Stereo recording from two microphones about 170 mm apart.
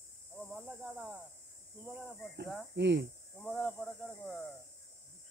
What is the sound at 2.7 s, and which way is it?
Speech, 90° right.